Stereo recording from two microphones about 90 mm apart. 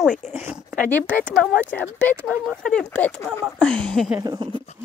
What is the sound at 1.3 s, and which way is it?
Speech, 5° left (ahead or behind).